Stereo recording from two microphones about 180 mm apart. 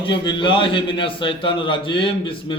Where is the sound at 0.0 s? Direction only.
25° left (ahead or behind).